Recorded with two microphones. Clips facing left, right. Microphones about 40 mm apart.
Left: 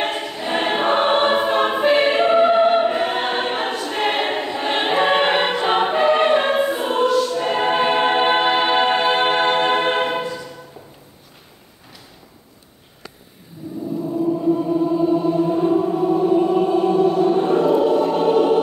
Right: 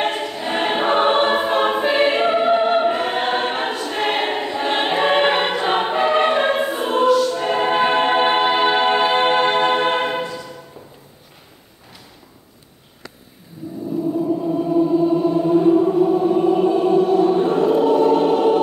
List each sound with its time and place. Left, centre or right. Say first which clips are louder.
0.0 s choir: right 2 dB; centre
14.0 s choir: left 2 dB; centre
14.6 s music: right 2 dB; centre